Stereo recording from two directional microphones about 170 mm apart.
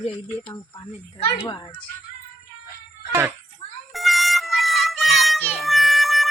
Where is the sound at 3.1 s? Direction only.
15° right (ahead or behind).